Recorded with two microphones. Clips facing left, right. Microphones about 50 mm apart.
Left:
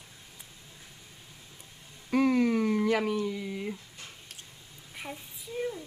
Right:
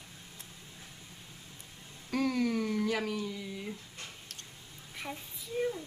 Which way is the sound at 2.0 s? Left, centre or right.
Left.